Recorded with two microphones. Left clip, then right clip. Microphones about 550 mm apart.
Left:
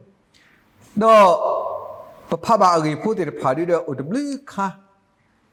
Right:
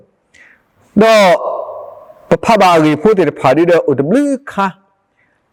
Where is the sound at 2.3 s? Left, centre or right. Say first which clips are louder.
Right 7 dB; right.